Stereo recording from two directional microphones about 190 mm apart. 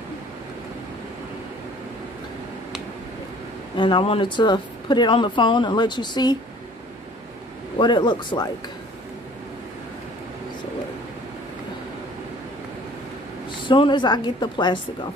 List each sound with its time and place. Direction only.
3.7 s a woman's voice: 25° left (ahead or behind)
7.8 s a woman's voice: 25° left (ahead or behind)
13.5 s a woman's voice: 25° left (ahead or behind)